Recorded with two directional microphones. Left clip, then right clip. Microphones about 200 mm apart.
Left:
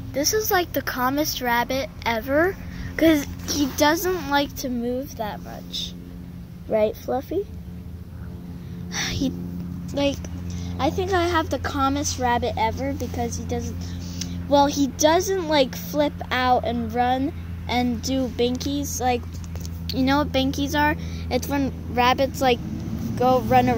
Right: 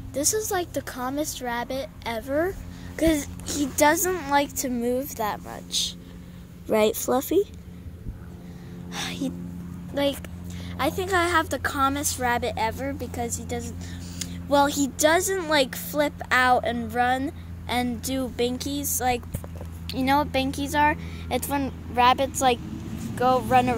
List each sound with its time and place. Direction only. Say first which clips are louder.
0.1 s a child's voice: left 4 dB; 15° right (ahead or behind)
4.6 s a woman's voice: right 1 dB; 35° right (ahead or behind)
8.9 s music: left 4 dB; centre (ahead or behind)
9.9 s speech: left 1 dB; centre (ahead or behind)